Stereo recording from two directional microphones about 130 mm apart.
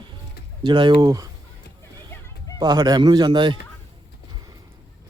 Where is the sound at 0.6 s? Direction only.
35° right (ahead or behind).